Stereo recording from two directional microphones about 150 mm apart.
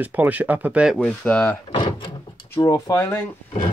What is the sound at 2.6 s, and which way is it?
Speech, 20° left (ahead or behind).